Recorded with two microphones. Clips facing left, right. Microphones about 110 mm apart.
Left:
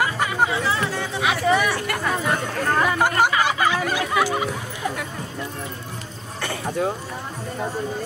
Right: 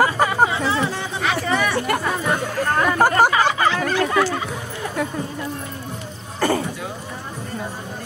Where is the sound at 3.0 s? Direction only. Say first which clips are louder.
Right 4 dB; 40° right (ahead or behind).